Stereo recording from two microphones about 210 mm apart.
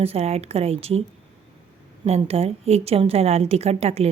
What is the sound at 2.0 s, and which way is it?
A woman's voice, 30° right (ahead or behind).